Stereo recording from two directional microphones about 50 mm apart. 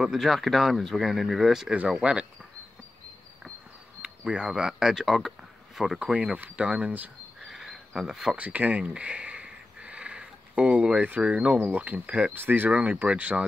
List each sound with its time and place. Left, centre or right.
0.0 s speech: centre
1.9 s speech: centre
4.3 s speech: centre
6.3 s speech: right
7.4 s cricket: centre
8.4 s a sound: right
11.6 s speech: right
12.7 s speech: right